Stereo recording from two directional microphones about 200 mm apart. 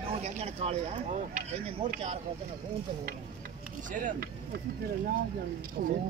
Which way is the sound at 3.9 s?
40° right (ahead or behind).